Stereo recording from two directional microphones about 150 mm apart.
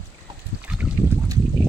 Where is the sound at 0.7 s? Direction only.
5° right (ahead or behind).